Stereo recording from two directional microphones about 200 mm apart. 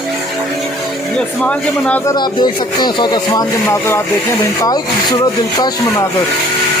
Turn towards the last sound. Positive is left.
turn(degrees=20)  # may be behind; listen again after turning